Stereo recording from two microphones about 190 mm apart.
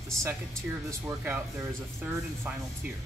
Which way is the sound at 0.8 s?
15° right (ahead or behind).